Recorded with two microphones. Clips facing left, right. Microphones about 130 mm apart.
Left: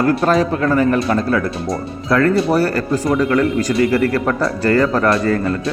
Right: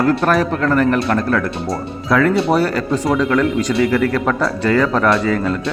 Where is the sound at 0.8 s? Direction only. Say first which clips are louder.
Even; 70° right (ahead or behind).